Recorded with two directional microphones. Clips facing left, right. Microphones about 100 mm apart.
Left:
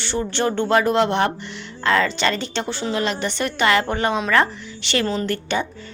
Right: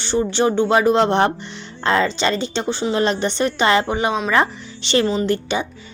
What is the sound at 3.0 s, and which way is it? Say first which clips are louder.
A woman's voice: right 5 dB; 30° right (ahead or behind).